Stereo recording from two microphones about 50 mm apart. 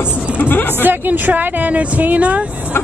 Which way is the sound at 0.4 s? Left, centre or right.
Left.